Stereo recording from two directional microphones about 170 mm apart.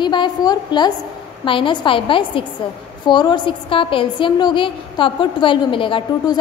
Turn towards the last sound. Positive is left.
turn(degrees=30)  # may be behind; listen again after turning